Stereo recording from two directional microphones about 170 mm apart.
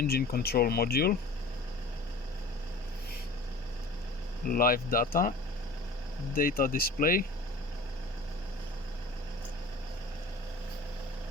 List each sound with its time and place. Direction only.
0.0 s speech: 65° left (ahead or behind)
4.4 s speech: 60° left (ahead or behind)
6.3 s speech: 55° left (ahead or behind)